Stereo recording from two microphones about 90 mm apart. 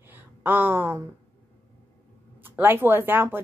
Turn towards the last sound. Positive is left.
turn(degrees=-25)  # may be behind; listen again after turning